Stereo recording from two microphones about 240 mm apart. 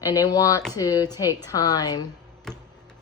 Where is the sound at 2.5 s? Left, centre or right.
Centre.